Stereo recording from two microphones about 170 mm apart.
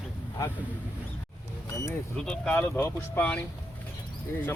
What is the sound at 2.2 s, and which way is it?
Speech, 5° left (ahead or behind).